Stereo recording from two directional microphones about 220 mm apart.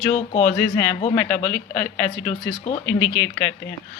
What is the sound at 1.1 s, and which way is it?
Speech, 5° left (ahead or behind).